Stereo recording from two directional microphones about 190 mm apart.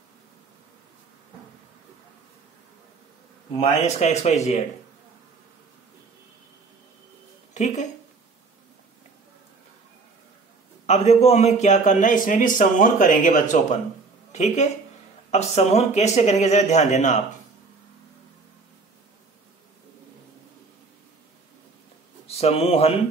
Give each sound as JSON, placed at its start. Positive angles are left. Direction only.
{"t": 3.8, "sound": "a man's voice", "side_deg": 35}
{"t": 7.5, "sound": "speech", "side_deg": 40}
{"t": 10.9, "sound": "a man's voice", "side_deg": 35}
{"t": 22.4, "sound": "a man's voice", "side_deg": 35}